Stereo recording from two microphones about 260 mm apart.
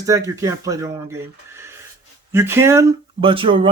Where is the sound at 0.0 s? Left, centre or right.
Centre.